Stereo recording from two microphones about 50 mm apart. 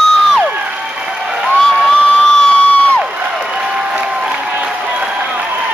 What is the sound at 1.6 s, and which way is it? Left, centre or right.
Crowd, centre.